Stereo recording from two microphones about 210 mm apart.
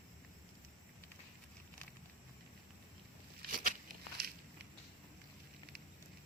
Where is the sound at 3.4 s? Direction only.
40° right (ahead or behind).